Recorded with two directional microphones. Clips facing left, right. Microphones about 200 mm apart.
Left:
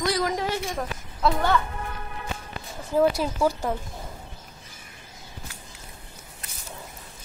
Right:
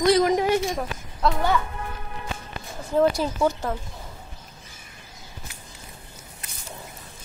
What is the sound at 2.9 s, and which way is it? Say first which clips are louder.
Speech: right 1 dB; 5° left (ahead or behind).